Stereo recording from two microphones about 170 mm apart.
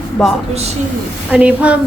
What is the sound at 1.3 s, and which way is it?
Speech, 10° right (ahead or behind).